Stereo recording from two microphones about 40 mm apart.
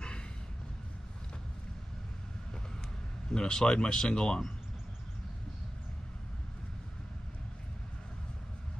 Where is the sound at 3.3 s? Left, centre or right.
Centre.